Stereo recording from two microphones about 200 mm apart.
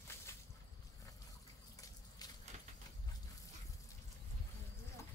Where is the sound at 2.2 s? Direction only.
20° left (ahead or behind).